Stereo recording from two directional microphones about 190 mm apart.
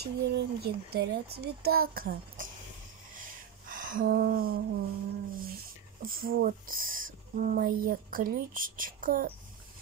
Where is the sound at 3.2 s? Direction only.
45° right (ahead or behind).